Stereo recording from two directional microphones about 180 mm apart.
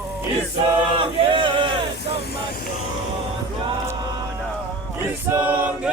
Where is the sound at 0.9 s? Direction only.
30° right (ahead or behind).